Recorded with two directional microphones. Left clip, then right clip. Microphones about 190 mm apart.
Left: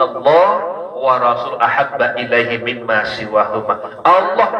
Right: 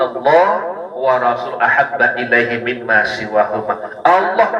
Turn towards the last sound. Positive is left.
turn(degrees=-15)  # may be behind; listen again after turning